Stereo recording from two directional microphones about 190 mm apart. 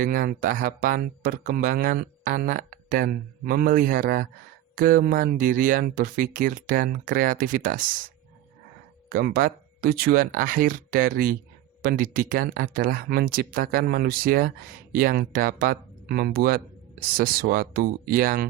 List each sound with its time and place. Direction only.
0.0 s speech: 50° right (ahead or behind)
9.0 s speech: 50° right (ahead or behind)